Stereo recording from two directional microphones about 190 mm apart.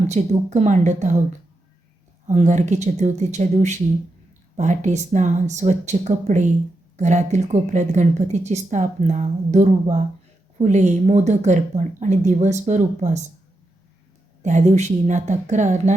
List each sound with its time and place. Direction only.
0.1 s speech: 40° right (ahead or behind)
2.2 s speech: 40° right (ahead or behind)
14.4 s speech: 40° right (ahead or behind)